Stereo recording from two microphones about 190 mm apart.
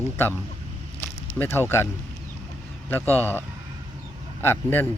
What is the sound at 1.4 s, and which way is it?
Speech, 10° left (ahead or behind).